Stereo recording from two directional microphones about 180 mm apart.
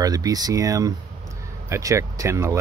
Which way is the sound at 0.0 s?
20° right (ahead or behind).